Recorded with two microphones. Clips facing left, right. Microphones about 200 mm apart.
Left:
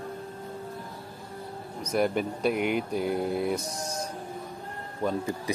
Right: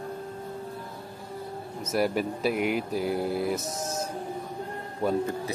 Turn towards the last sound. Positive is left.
turn(degrees=15)  # may be behind; listen again after turning